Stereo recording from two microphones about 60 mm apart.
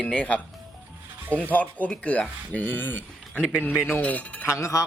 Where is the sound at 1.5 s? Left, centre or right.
Left.